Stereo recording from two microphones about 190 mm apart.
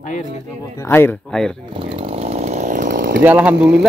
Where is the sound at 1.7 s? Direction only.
25° right (ahead or behind); by 3.2 s 45° right (ahead or behind).